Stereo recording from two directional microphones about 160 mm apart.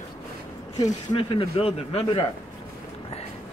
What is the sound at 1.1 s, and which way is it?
Speech, 35° left (ahead or behind).